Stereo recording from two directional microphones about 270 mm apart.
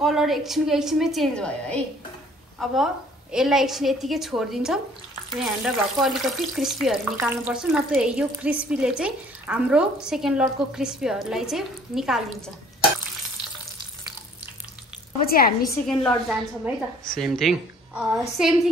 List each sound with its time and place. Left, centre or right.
0.0 s speech: centre
15.1 s a woman's voice: left
15.9 s speech: centre